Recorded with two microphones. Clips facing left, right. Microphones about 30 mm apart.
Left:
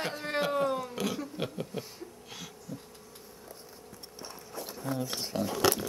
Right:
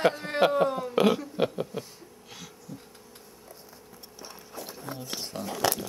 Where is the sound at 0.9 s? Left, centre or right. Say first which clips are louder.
Right 11 dB; right.